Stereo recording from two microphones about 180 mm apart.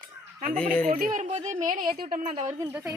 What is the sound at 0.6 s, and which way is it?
Speech, 45° right (ahead or behind).